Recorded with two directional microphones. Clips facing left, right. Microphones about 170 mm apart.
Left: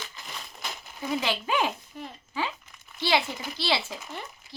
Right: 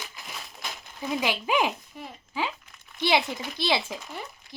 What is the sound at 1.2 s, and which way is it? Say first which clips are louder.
Speech: right 3 dB; 15° right (ahead or behind).